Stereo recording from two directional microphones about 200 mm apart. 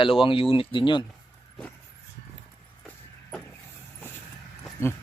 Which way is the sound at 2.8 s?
5° left (ahead or behind).